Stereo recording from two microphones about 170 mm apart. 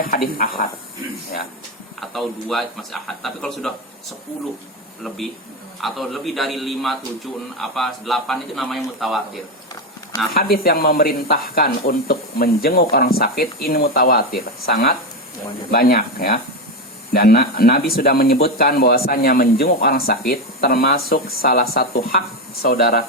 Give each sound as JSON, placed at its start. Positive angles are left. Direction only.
{"t": 0.0, "sound": "speech", "side_deg": 60}
{"t": 2.0, "sound": "speech", "side_deg": 0}
{"t": 5.0, "sound": "speech", "side_deg": 0}
{"t": 10.3, "sound": "speech", "side_deg": 65}